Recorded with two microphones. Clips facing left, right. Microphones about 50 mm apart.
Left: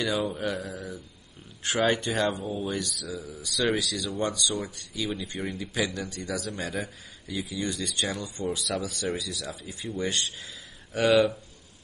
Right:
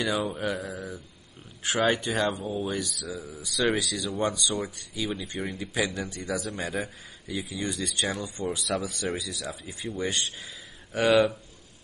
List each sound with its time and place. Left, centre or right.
0.0 s speech: centre
5.9 s speech: centre